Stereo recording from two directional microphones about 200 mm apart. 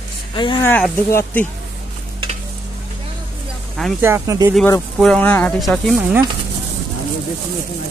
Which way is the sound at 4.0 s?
15° right (ahead or behind).